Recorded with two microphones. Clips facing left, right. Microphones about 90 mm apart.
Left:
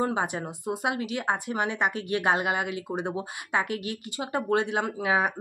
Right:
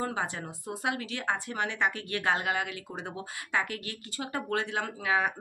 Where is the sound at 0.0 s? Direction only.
20° left (ahead or behind).